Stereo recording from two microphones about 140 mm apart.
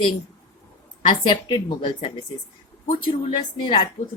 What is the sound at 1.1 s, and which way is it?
A woman's voice, 35° left (ahead or behind).